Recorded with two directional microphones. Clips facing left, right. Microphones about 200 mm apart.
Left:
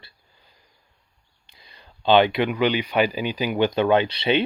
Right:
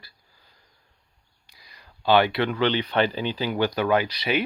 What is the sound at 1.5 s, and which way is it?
Speech, 25° left (ahead or behind).